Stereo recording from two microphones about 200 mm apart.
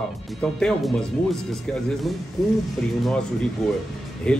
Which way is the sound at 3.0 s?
5° left (ahead or behind).